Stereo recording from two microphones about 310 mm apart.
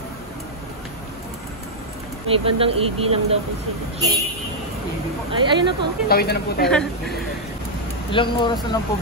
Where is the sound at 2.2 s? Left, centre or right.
Centre.